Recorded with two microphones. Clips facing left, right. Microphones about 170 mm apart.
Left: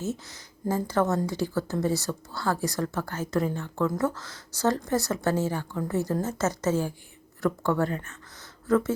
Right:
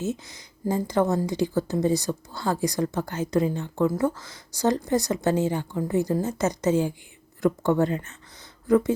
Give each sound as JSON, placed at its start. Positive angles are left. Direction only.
{"t": 0.0, "sound": "a woman's voice", "side_deg": -15}